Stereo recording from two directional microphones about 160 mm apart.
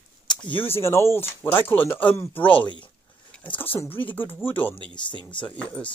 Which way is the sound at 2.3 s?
35° left (ahead or behind).